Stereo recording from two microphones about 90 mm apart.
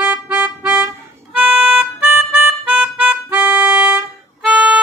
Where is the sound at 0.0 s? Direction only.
15° right (ahead or behind).